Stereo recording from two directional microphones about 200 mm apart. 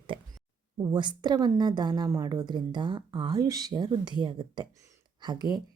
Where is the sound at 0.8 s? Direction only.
20° right (ahead or behind).